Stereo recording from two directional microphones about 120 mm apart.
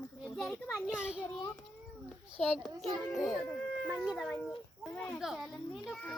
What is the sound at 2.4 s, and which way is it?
A child's voice, 5° left (ahead or behind).